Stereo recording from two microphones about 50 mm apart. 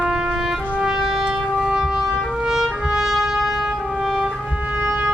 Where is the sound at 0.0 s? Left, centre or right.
Centre.